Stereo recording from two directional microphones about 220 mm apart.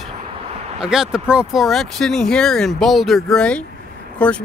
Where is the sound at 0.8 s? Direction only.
5° right (ahead or behind).